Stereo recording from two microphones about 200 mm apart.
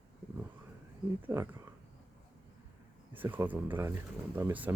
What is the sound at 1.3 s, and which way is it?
Speech, 15° right (ahead or behind).